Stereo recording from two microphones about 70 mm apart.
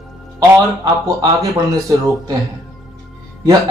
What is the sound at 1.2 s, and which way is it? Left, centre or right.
Speech, right.